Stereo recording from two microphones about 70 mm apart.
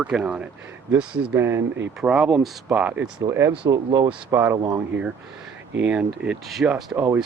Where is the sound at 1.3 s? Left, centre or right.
Right.